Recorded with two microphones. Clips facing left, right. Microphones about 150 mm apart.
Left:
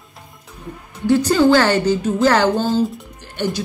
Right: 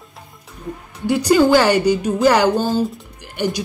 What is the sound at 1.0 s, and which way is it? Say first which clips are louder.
Speech: even; 10° right (ahead or behind).